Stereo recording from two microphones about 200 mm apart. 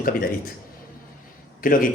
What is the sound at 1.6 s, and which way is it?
Speech, 45° left (ahead or behind).